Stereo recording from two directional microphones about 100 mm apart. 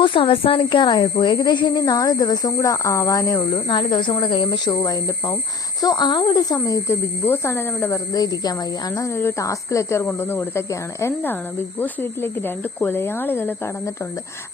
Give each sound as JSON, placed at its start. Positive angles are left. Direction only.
{"t": 0.0, "sound": "speech", "side_deg": 60}
{"t": 3.5, "sound": "speech", "side_deg": 50}